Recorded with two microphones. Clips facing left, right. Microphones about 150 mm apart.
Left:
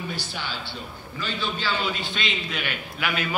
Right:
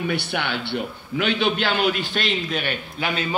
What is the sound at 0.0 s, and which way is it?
A man's voice, 65° right (ahead or behind).